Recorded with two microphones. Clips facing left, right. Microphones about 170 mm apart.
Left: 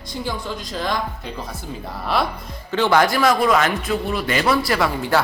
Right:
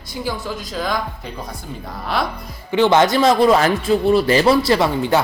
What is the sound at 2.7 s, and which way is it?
Speech, 20° right (ahead or behind).